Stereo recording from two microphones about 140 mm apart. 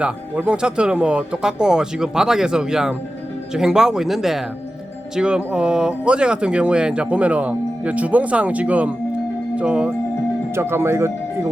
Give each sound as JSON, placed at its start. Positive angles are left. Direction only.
{"t": 0.0, "sound": "speech", "side_deg": -10}